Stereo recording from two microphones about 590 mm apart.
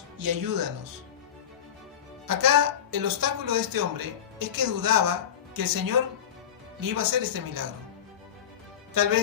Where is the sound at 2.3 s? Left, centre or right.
Right.